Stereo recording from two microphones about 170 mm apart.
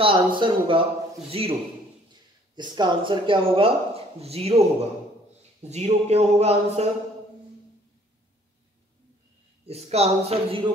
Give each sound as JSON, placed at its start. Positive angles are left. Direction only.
{"t": 0.0, "sound": "speech", "side_deg": -30}
{"t": 2.5, "sound": "speech", "side_deg": -25}
{"t": 9.7, "sound": "speech", "side_deg": -40}